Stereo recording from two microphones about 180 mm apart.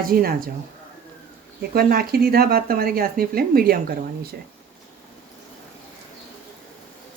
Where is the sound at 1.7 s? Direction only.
55° right (ahead or behind).